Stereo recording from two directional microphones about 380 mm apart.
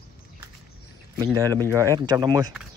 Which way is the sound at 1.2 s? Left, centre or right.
Centre.